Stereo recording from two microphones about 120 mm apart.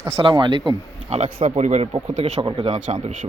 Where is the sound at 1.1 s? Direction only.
60° right (ahead or behind).